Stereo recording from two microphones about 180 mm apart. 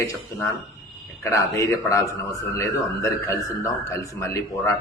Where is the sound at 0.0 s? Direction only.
15° left (ahead or behind).